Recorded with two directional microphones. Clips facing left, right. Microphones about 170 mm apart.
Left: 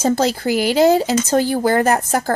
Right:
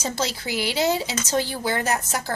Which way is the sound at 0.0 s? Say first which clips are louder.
Left 11 dB; 50° left (ahead or behind).